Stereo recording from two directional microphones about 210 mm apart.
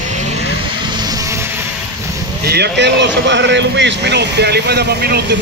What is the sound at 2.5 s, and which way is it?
Speech, 55° right (ahead or behind).